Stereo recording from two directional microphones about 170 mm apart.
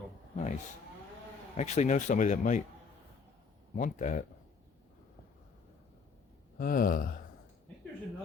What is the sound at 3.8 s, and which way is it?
Speech, 45° left (ahead or behind).